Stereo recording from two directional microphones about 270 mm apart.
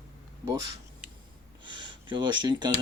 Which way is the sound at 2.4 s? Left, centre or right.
Centre.